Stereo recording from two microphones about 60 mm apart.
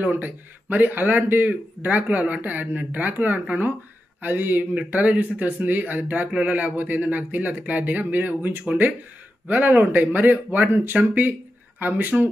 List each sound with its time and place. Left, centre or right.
0.0 s a man's voice: right